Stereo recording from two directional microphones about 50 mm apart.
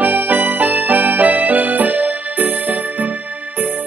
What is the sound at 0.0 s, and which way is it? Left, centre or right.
Music, right.